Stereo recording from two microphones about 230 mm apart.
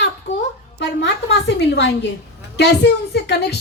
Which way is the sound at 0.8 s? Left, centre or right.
Left.